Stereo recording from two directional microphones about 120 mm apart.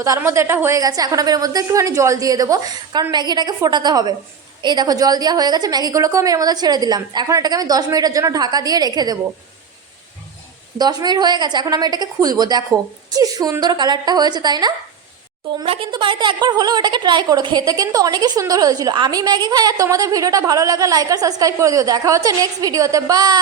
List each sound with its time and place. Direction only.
0.2 s a woman's voice: 25° right (ahead or behind)
0.8 s a woman's voice: 30° right (ahead or behind)
10.8 s a woman's voice: 35° right (ahead or behind)
15.6 s a woman's voice: 50° right (ahead or behind); by 23.4 s 35° right (ahead or behind)